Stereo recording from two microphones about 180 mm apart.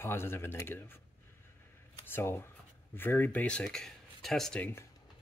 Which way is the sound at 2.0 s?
10° left (ahead or behind).